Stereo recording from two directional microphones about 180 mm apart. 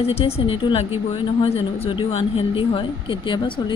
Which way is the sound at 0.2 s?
30° left (ahead or behind).